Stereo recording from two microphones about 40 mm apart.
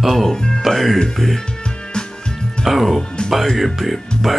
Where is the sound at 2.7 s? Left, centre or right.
Centre.